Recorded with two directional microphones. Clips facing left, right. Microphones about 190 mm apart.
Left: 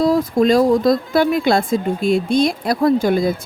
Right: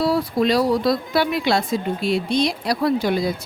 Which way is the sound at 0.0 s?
45° left (ahead or behind).